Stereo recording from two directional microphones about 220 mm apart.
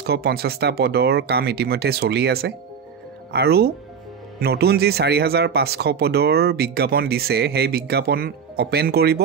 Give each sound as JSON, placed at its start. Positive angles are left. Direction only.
{"t": 0.0, "sound": "speech", "side_deg": -45}